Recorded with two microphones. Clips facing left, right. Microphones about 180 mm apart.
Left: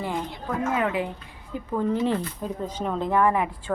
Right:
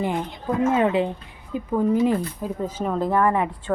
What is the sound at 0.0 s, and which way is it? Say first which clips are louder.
A woman's voice: right 4 dB; 20° right (ahead or behind).